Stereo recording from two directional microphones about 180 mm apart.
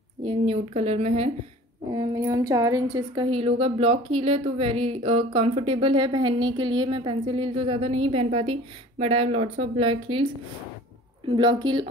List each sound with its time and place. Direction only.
0.2 s speech: 30° right (ahead or behind)
1.9 s a woman's voice: 20° right (ahead or behind)
3.3 s a woman's voice: 30° right (ahead or behind)